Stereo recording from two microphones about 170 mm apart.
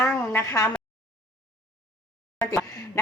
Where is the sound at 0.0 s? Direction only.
15° left (ahead or behind).